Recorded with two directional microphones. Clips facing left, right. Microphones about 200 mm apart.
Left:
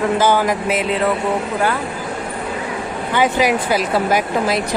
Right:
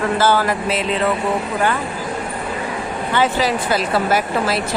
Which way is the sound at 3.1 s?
15° left (ahead or behind).